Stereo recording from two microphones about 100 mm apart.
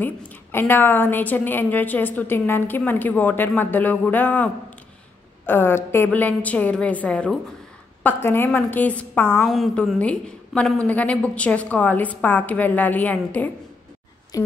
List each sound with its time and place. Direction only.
0.0 s a woman's voice: 20° left (ahead or behind)
5.5 s a woman's voice: 20° left (ahead or behind)
8.0 s a woman's voice: 20° left (ahead or behind)
9.4 s a woman's voice: 5° left (ahead or behind)
14.3 s speech: 35° left (ahead or behind)